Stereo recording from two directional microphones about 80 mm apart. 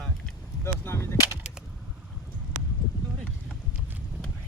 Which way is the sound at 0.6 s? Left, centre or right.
Left.